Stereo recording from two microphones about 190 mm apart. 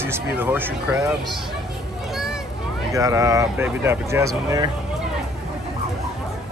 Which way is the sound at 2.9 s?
15° right (ahead or behind).